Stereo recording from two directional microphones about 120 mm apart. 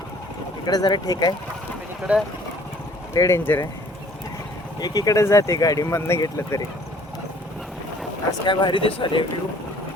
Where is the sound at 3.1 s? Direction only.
25° left (ahead or behind).